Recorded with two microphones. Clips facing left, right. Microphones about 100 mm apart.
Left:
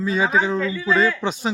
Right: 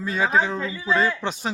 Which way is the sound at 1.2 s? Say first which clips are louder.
Left 4 dB; centre (ahead or behind).